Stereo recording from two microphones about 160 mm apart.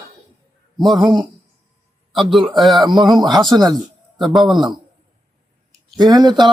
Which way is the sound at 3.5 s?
25° right (ahead or behind).